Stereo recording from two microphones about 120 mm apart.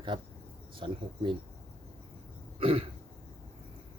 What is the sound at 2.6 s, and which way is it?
Speech, 50° right (ahead or behind).